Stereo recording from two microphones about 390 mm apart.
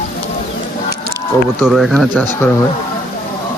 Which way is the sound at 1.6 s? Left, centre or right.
Centre.